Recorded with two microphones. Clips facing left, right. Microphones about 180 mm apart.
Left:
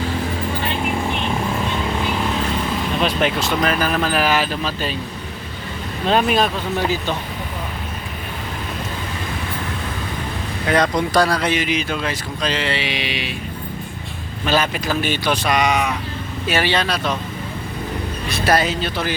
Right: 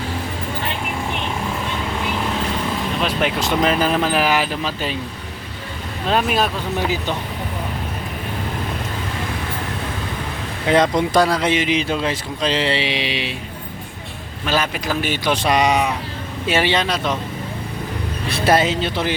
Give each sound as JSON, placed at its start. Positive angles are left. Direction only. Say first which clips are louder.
{"t": 3.0, "sound": "speech", "louder": "left 1 dB", "side_deg": -10}
{"t": 6.1, "sound": "speech", "louder": "left 2 dB", "side_deg": 0}
{"t": 10.7, "sound": "speech", "louder": "right 2 dB", "side_deg": -20}
{"t": 14.4, "sound": "speech", "louder": "left 2 dB", "side_deg": -10}
{"t": 18.3, "sound": "speech", "louder": "right 2 dB", "side_deg": -25}